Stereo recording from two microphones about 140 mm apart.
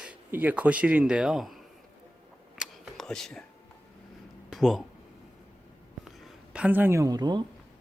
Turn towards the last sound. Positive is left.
turn(degrees=-30)  # may be behind; listen again after turning